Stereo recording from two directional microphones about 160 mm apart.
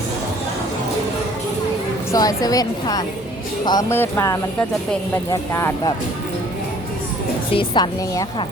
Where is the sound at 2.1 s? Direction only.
20° left (ahead or behind).